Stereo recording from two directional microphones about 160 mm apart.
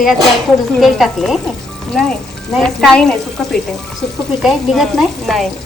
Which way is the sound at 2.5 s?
Centre (ahead or behind).